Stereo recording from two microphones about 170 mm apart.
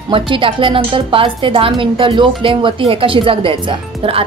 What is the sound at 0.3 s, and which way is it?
Speech, 30° right (ahead or behind).